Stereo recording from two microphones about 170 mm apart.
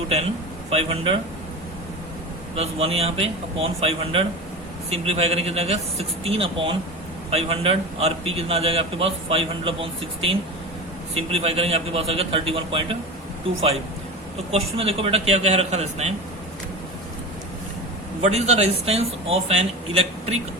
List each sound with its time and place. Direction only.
0.7 s a man's voice: 35° right (ahead or behind)
2.6 s a man's voice: 35° right (ahead or behind)
14.5 s a man's voice: 35° right (ahead or behind)
18.2 s a man's voice: 40° right (ahead or behind)